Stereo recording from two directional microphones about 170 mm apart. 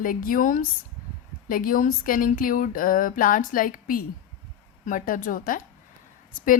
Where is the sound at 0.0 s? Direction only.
55° left (ahead or behind).